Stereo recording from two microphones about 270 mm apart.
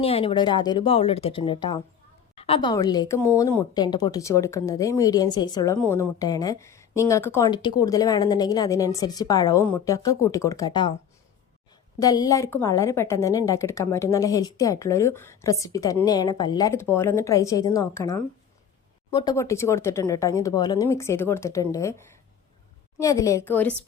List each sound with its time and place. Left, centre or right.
0.0 s a woman's voice: left
11.9 s a woman's voice: centre